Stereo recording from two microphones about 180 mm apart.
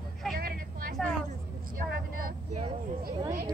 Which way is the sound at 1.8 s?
50° right (ahead or behind).